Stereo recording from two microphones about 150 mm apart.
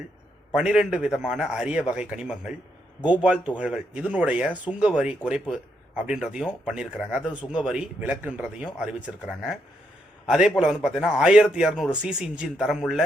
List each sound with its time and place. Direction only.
0.5 s a man's voice: 5° right (ahead or behind)